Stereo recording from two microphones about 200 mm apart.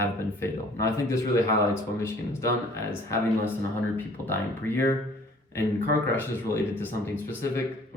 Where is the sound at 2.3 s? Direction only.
15° left (ahead or behind).